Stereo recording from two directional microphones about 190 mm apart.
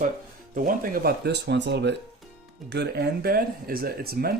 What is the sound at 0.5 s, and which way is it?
Speech, 45° right (ahead or behind).